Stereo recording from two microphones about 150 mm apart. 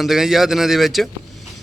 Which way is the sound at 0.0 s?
5° right (ahead or behind).